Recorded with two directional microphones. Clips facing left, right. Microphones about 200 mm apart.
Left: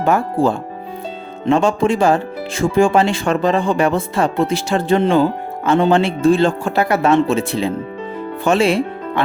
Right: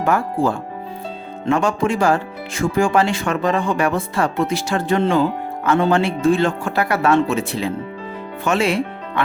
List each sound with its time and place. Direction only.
0.0 s speech: 25° left (ahead or behind)